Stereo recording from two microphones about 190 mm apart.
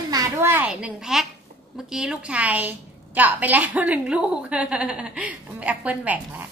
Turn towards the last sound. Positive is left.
turn(degrees=-10)  # may be behind; listen again after turning